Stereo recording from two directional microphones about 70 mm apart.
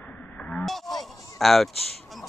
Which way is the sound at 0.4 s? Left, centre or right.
Centre.